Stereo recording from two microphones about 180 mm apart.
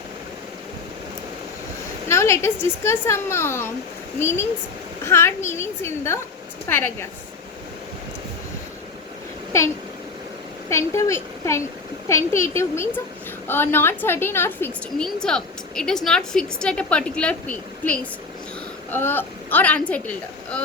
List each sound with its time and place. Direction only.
2.0 s speech: 15° left (ahead or behind)
10.7 s a woman's voice: 15° left (ahead or behind)